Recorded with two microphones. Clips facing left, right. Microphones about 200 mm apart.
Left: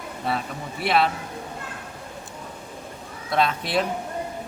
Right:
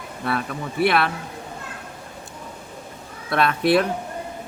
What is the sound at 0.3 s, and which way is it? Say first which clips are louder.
Speech: right 2 dB; 60° right (ahead or behind).